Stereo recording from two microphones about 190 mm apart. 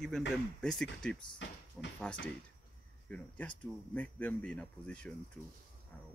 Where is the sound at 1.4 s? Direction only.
70° left (ahead or behind).